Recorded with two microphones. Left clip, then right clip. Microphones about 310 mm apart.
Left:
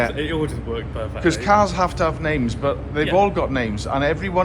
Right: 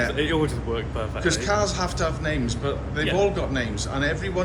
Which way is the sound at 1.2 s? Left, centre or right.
Centre.